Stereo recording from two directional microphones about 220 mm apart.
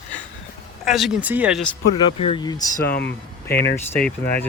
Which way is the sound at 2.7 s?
45° left (ahead or behind).